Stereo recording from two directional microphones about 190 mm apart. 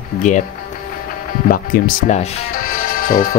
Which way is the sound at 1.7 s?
50° left (ahead or behind).